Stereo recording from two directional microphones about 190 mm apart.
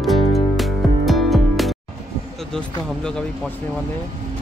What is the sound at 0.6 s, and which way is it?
Music, centre (ahead or behind).